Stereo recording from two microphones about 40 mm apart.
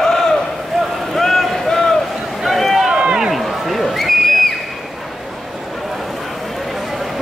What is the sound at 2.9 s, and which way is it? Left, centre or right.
Run, right.